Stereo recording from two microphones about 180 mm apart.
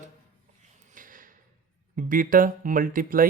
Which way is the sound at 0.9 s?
50° right (ahead or behind).